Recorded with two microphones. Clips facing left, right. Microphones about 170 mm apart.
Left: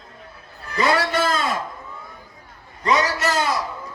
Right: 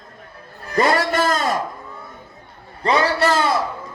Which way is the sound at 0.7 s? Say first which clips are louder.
Right 3 dB; 50° right (ahead or behind).